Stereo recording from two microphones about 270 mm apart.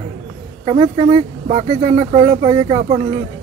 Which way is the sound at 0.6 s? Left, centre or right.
Right.